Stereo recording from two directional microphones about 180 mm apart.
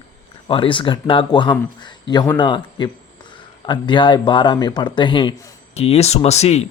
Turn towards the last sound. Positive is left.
turn(degrees=35)  # may be behind; listen again after turning